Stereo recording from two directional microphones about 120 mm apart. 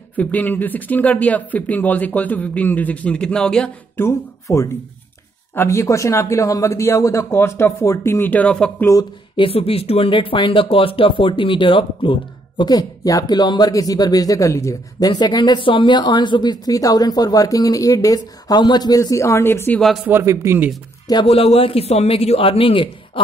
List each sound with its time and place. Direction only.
0.1 s speech: 15° left (ahead or behind)
3.9 s speech: 20° left (ahead or behind)
9.4 s speech: 50° left (ahead or behind); by 19.8 s 20° left (ahead or behind)
20.1 s a man's voice: 20° right (ahead or behind)
21.3 s a man's voice: 55° left (ahead or behind)